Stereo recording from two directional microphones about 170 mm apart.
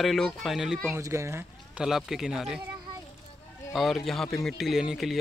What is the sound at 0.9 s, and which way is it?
Speech, 15° right (ahead or behind).